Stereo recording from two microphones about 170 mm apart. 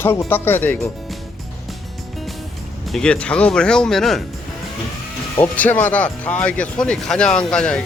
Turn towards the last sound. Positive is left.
turn(degrees=5)  # may be behind; listen again after turning